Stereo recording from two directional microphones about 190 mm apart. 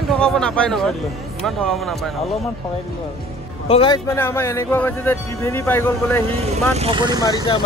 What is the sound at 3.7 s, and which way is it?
Speech, 25° left (ahead or behind).